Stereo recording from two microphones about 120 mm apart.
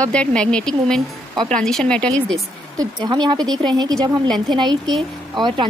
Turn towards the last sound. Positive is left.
turn(degrees=-40)  # may be behind; listen again after turning